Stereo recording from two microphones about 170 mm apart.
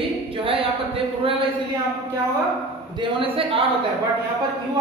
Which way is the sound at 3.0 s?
30° right (ahead or behind).